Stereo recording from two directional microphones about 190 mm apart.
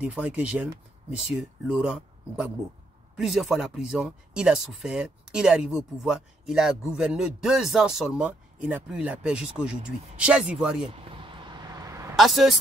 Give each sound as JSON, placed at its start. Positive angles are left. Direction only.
{"t": 0.0, "sound": "speech", "side_deg": -5}
{"t": 10.9, "sound": "a sound", "side_deg": -25}
{"t": 12.2, "sound": "speech", "side_deg": 0}